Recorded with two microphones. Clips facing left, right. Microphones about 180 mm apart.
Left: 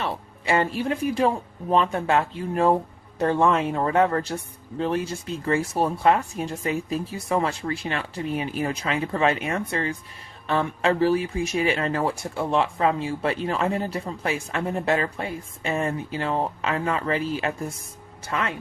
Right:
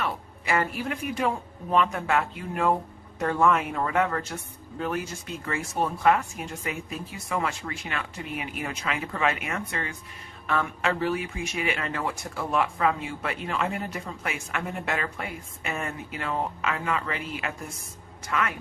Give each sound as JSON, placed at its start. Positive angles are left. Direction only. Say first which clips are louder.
{"t": 0.0, "sound": "speech", "louder": "left 2 dB", "side_deg": 30}